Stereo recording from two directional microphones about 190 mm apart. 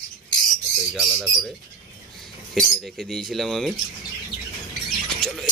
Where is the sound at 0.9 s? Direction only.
Centre (ahead or behind).